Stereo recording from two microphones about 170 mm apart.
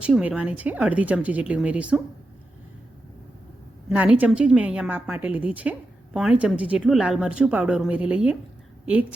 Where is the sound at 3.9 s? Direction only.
10° right (ahead or behind).